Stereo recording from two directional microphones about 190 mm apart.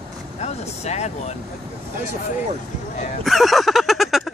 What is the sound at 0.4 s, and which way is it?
Speech, 35° left (ahead or behind).